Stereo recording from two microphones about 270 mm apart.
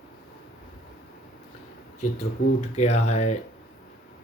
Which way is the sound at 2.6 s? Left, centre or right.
Left.